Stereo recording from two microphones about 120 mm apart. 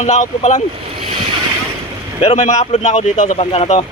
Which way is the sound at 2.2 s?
55° left (ahead or behind).